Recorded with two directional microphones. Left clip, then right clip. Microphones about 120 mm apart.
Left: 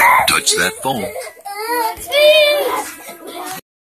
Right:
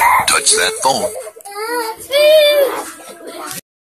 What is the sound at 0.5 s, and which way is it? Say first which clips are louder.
Speech: right 3 dB; 35° right (ahead or behind).